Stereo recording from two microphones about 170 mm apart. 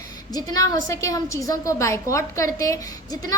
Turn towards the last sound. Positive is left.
turn(degrees=20)  # may be behind; listen again after turning